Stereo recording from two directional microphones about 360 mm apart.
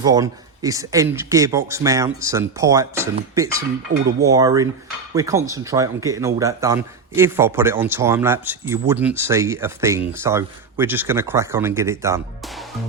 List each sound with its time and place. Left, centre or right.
0.0 s speech: centre